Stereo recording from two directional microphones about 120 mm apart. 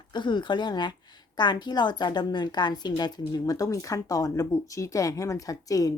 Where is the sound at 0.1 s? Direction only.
40° left (ahead or behind).